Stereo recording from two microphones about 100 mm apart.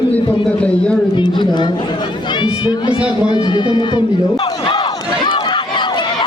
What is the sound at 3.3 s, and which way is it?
Crowd, 50° left (ahead or behind).